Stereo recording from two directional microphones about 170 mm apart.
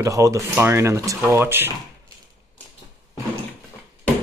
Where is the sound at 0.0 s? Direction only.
20° right (ahead or behind).